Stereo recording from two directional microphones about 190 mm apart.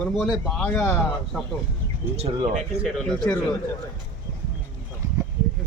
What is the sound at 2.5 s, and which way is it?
Speech, centre (ahead or behind).